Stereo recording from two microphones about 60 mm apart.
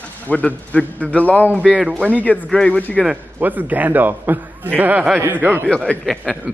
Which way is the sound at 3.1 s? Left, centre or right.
Right.